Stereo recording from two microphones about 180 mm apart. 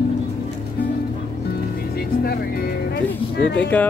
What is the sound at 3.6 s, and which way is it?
Speech, 10° left (ahead or behind).